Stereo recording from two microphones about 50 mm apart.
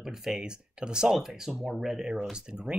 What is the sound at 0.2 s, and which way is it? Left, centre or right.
Speech, centre.